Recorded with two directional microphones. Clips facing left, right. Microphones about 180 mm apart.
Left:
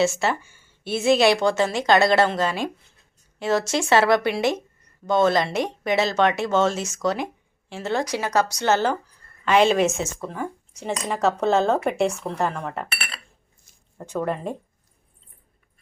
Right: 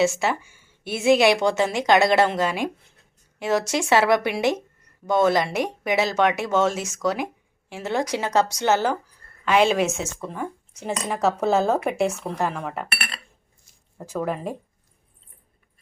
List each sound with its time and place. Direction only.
0.0 s a woman's voice: 10° right (ahead or behind)